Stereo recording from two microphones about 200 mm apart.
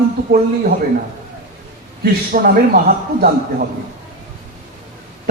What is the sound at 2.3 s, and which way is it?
Speech, 45° right (ahead or behind).